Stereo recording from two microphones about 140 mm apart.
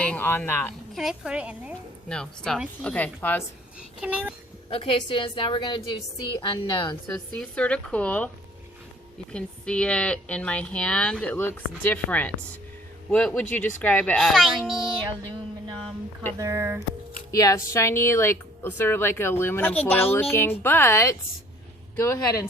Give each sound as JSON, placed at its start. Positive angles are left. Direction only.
{"t": 0.0, "sound": "speech", "side_deg": 10}
{"t": 0.9, "sound": "a woman's voice", "side_deg": -5}
{"t": 2.0, "sound": "a woman's voice", "side_deg": 5}
{"t": 3.8, "sound": "a child's voice", "side_deg": -10}
{"t": 4.7, "sound": "a woman's voice", "side_deg": 40}
{"t": 7.1, "sound": "a woman's voice", "side_deg": 10}
{"t": 9.3, "sound": "a woman's voice", "side_deg": 5}
{"t": 16.4, "sound": "speech", "side_deg": -20}
{"t": 17.3, "sound": "a woman's voice", "side_deg": 25}